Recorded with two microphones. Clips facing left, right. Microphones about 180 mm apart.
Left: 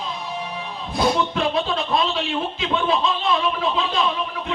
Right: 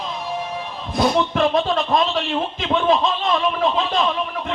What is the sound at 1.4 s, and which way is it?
Music, 45° right (ahead or behind).